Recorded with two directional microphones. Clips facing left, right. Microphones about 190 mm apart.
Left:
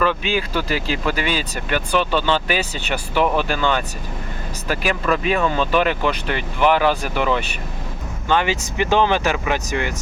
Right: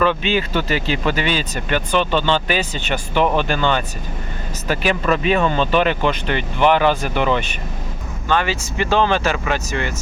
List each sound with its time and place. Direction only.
0.0 s speech: 5° left (ahead or behind)
8.3 s speech: 15° left (ahead or behind)